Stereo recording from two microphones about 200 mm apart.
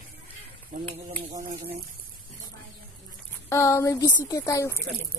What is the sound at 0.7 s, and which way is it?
Speech, 40° right (ahead or behind).